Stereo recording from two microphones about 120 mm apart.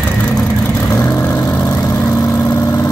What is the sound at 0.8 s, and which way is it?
Vehicle, 25° left (ahead or behind).